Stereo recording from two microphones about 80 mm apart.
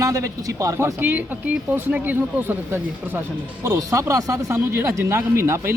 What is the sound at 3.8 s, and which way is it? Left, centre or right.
Speech, right.